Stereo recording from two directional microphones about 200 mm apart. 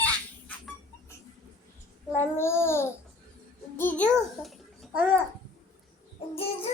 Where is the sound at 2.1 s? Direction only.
10° left (ahead or behind).